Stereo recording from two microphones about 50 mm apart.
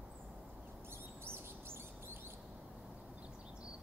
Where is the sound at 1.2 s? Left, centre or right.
Right.